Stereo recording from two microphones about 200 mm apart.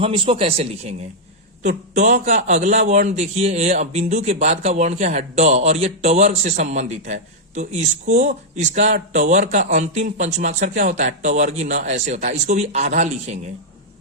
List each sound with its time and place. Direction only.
0.0 s a man's voice: 25° right (ahead or behind)